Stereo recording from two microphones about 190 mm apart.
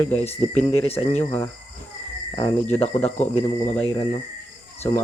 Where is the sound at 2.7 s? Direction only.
10° left (ahead or behind).